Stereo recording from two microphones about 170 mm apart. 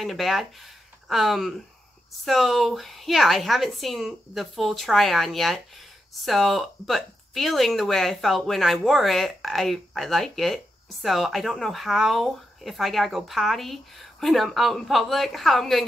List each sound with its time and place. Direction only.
0.0 s speech: centre (ahead or behind)